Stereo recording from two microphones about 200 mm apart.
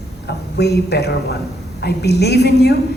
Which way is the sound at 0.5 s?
55° left (ahead or behind).